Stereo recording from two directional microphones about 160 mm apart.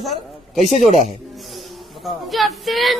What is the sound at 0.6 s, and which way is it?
Speech, 45° right (ahead or behind).